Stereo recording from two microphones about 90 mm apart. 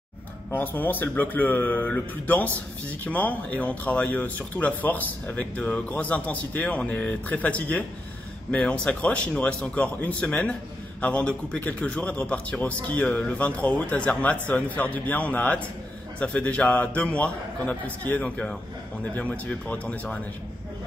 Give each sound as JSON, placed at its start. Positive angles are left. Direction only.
{"t": 0.5, "sound": "a man's voice", "side_deg": 20}